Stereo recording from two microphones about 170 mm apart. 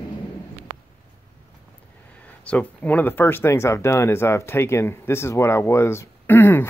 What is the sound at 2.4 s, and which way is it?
Speech, 10° left (ahead or behind).